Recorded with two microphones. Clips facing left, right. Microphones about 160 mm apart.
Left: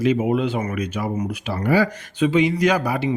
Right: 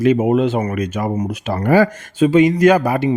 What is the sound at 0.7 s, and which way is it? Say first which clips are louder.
Speech: right 4 dB; 50° right (ahead or behind).